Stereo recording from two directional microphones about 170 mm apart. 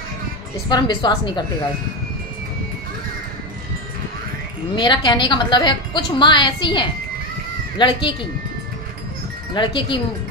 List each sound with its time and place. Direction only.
0.7 s a woman's voice: 25° left (ahead or behind)
4.7 s a woman's voice: 25° left (ahead or behind)
9.5 s a woman's voice: 30° left (ahead or behind)